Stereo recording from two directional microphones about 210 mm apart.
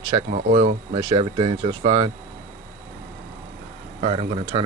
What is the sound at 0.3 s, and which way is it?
Speech, 40° right (ahead or behind).